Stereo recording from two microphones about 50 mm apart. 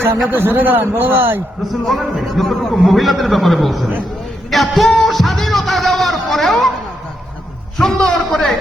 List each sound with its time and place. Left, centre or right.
0.3 s a man's voice: right
1.8 s a man's voice: centre
7.8 s a man's voice: centre